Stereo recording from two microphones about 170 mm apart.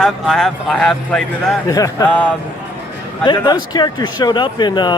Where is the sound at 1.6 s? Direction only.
20° left (ahead or behind).